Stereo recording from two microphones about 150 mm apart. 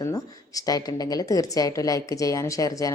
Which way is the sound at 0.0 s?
25° left (ahead or behind).